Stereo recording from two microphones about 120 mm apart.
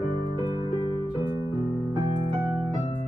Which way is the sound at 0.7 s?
45° left (ahead or behind).